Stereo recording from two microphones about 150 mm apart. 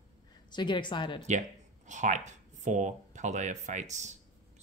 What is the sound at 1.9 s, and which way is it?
Speech, 55° right (ahead or behind).